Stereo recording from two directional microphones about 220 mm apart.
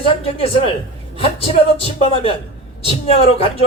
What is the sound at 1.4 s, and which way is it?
A man's voice, 25° left (ahead or behind).